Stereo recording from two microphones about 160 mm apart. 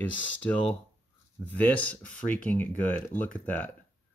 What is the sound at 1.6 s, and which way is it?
Speech, 10° left (ahead or behind).